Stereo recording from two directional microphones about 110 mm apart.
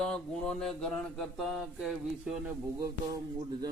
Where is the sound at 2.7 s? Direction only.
30° right (ahead or behind).